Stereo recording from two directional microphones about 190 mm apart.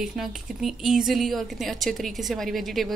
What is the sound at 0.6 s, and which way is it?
A woman's voice, centre (ahead or behind).